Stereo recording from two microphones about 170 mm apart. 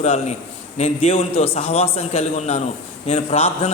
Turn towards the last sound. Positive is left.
turn(degrees=40)  # may be behind; listen again after turning